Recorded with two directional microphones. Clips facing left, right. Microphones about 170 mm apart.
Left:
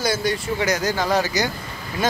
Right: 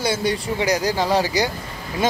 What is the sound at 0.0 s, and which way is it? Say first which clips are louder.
Speech: right 1 dB; 30° right (ahead or behind).